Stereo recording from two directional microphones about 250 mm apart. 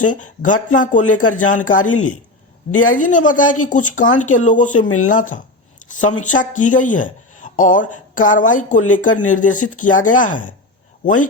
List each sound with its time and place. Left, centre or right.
0.0 s speech: left
1.0 s speech: left
1.3 s speech: left
2.9 s speech: left